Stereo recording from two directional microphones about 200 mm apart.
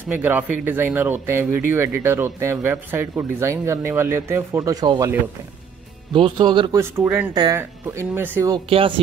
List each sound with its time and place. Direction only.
0.2 s speech: 10° right (ahead or behind)
6.1 s speech: 25° right (ahead or behind)
6.8 s speech: 10° right (ahead or behind)
8.6 s speech: 25° right (ahead or behind)